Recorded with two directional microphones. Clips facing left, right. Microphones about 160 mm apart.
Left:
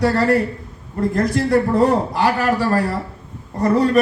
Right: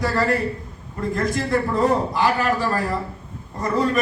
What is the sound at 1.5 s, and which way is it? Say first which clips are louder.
A man's voice: left 4 dB; 40° left (ahead or behind).